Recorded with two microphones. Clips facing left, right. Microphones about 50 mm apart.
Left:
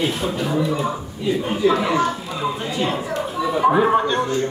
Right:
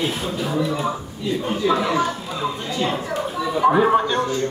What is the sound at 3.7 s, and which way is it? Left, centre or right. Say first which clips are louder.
Music: right 1 dB; centre.